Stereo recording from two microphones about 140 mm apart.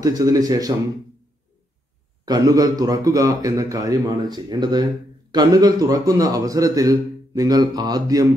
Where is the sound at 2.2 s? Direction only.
25° right (ahead or behind).